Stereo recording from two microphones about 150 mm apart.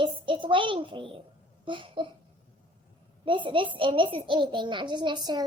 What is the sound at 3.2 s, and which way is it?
A child's voice, 35° right (ahead or behind).